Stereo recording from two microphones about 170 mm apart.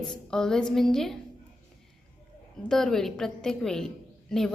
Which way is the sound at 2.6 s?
5° left (ahead or behind).